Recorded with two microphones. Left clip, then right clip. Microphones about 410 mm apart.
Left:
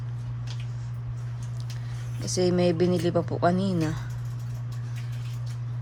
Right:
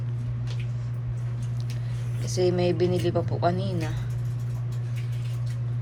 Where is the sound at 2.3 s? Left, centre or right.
Centre.